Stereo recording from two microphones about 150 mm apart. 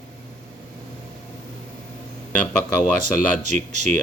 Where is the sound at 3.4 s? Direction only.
50° right (ahead or behind).